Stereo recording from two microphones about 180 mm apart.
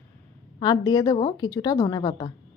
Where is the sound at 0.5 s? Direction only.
25° left (ahead or behind).